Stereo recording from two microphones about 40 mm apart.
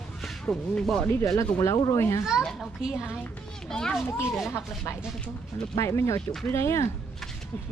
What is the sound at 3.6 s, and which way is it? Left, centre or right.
Speech, centre.